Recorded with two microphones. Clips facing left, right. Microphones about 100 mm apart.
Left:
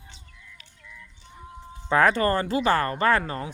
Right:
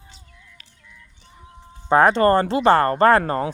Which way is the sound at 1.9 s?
25° right (ahead or behind).